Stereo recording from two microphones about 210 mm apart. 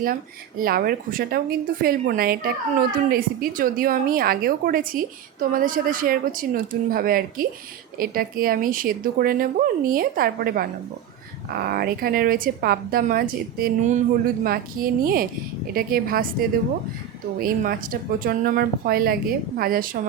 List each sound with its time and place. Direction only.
0.0 s speech: 40° right (ahead or behind)